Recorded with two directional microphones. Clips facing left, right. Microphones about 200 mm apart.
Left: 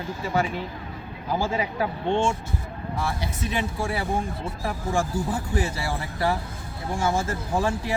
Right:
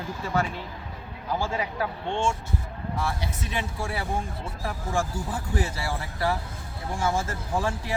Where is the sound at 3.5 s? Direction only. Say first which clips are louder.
Left 5 dB; 10° left (ahead or behind).